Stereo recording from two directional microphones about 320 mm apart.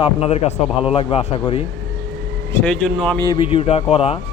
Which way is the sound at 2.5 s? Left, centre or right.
Centre.